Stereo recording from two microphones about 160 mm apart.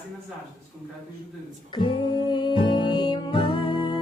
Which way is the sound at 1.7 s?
30° left (ahead or behind).